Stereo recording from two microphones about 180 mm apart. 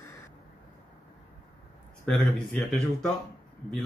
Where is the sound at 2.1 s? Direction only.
5° left (ahead or behind).